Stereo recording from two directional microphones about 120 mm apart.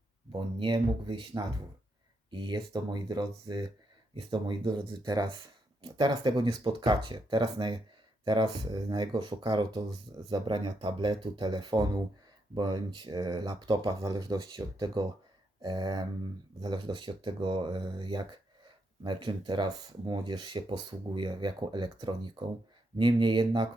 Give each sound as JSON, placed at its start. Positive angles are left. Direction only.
{"t": 0.3, "sound": "speech", "side_deg": -40}